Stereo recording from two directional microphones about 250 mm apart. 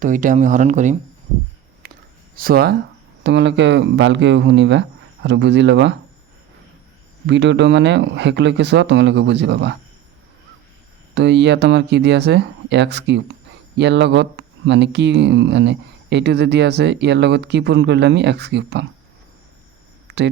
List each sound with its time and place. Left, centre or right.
0.0 s speech: right
1.8 s a sound: right
2.3 s speech: right
7.3 s speech: right
11.1 s speech: right
20.1 s a sound: right